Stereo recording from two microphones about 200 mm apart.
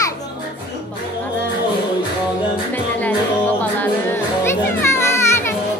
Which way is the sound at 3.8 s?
10° left (ahead or behind).